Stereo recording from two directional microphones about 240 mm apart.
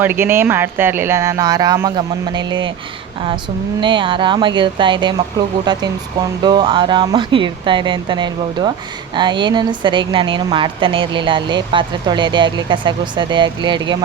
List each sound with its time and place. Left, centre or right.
0.0 s speech: centre
3.8 s a woman's voice: centre